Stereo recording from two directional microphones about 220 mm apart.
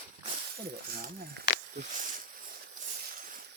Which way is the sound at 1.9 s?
35° right (ahead or behind).